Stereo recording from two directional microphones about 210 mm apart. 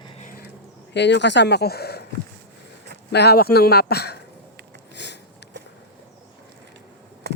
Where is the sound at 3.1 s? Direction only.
50° left (ahead or behind).